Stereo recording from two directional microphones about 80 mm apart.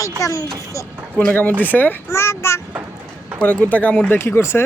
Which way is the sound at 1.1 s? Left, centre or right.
Left.